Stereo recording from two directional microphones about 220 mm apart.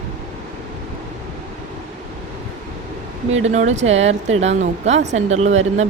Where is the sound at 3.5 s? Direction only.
30° right (ahead or behind).